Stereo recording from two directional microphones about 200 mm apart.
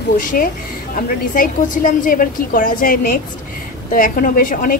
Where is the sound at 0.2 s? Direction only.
40° left (ahead or behind).